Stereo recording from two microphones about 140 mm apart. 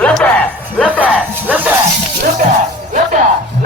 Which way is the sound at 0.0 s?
10° left (ahead or behind).